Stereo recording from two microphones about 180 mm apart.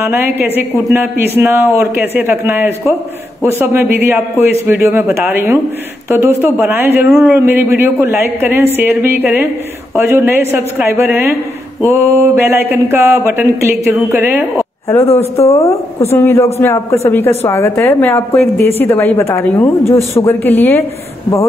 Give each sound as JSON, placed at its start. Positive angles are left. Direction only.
{"t": 0.0, "sound": "speech", "side_deg": -10}
{"t": 15.0, "sound": "speech", "side_deg": 35}
{"t": 16.1, "sound": "a woman's voice", "side_deg": 15}